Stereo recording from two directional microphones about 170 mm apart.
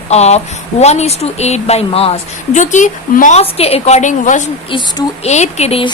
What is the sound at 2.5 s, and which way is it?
A woman's voice, 45° left (ahead or behind).